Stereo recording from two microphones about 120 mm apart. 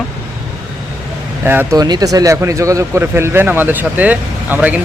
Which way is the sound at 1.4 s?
15° right (ahead or behind).